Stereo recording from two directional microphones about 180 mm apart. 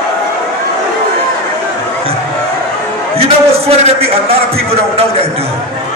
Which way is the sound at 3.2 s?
35° right (ahead or behind).